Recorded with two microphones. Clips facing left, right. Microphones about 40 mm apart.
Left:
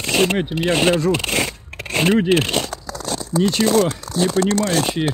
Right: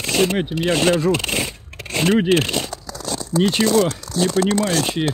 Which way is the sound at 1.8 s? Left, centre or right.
Left.